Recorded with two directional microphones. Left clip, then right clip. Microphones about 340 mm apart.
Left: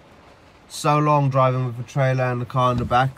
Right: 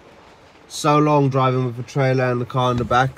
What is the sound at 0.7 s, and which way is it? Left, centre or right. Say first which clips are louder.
Speech: right 2 dB; centre.